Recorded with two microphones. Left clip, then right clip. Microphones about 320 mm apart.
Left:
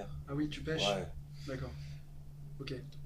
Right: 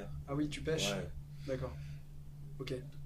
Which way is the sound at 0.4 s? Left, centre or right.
Centre.